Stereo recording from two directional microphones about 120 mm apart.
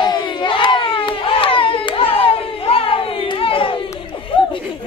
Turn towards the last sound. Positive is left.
turn(degrees=45)  # may be behind; listen again after turning